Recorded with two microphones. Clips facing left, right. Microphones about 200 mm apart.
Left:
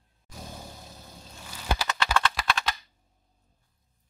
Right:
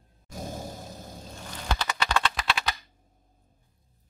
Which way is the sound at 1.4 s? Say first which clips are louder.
Left 1 dB; 10° left (ahead or behind).